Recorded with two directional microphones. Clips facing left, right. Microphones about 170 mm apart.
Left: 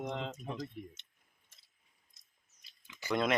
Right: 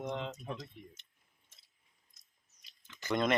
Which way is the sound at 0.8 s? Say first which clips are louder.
Left 6 dB; 60° left (ahead or behind).